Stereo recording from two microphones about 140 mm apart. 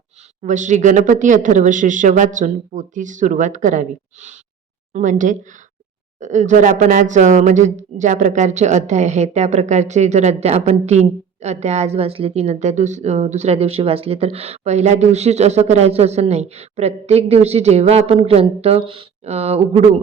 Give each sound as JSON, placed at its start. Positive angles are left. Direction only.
{"t": 0.4, "sound": "speech", "side_deg": -60}